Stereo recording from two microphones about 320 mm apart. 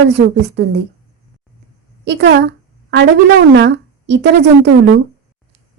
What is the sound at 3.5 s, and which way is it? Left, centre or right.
A woman's voice, right.